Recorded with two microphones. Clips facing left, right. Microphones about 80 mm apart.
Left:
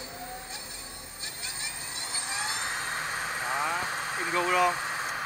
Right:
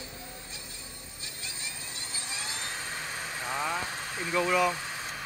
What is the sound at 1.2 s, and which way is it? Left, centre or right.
Vehicle, left.